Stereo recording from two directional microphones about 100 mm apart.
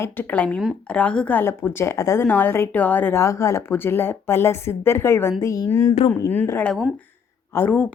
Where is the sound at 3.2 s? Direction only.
30° left (ahead or behind).